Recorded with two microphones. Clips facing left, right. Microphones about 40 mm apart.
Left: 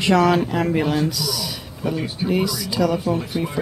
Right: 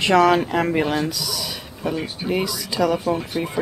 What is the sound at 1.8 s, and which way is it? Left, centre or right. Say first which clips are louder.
Speech: left 1 dB; centre.